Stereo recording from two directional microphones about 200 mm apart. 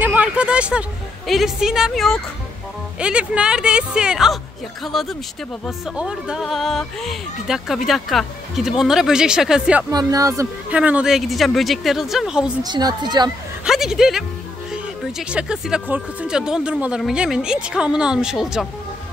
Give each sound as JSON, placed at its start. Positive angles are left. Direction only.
{"t": 0.0, "sound": "speech", "side_deg": -5}
{"t": 9.8, "sound": "speech", "side_deg": -15}
{"t": 12.6, "sound": "a woman's voice", "side_deg": -20}
{"t": 13.7, "sound": "speech", "side_deg": 0}